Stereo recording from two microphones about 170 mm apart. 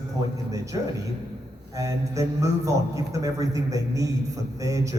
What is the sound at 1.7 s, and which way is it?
A man's voice, 20° right (ahead or behind).